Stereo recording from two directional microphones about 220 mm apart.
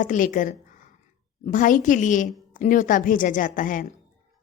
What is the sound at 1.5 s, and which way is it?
A woman's voice, 35° left (ahead or behind).